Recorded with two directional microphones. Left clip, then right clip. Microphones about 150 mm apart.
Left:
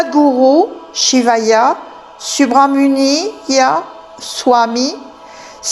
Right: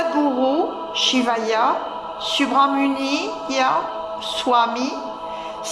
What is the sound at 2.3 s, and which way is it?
A man's voice, 45° left (ahead or behind).